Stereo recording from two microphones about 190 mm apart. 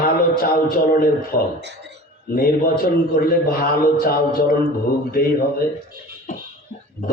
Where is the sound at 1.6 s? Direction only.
60° right (ahead or behind).